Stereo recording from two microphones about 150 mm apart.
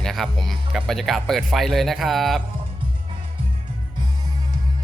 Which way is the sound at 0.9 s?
Centre (ahead or behind).